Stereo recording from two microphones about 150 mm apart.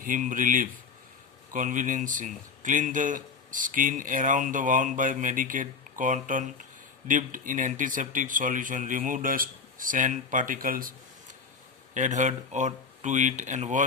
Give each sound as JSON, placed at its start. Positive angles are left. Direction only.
{"t": 0.0, "sound": "speech", "side_deg": -60}
{"t": 11.9, "sound": "speech", "side_deg": -55}